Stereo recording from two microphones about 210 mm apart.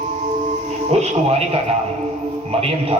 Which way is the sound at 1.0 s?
30° right (ahead or behind).